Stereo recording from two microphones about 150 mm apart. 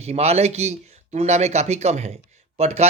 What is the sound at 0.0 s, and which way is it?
Speech, 45° right (ahead or behind).